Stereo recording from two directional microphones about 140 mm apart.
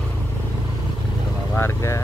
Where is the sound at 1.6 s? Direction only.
20° left (ahead or behind).